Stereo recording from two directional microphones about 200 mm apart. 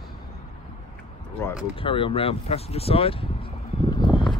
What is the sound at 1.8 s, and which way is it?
Speech, 25° left (ahead or behind).